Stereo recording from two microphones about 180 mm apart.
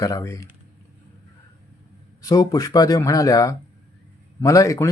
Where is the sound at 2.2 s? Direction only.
20° left (ahead or behind).